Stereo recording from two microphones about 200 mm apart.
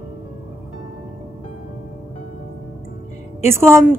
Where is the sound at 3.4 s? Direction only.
15° right (ahead or behind).